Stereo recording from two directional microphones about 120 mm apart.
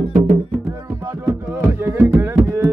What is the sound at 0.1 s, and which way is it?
Music, 75° right (ahead or behind).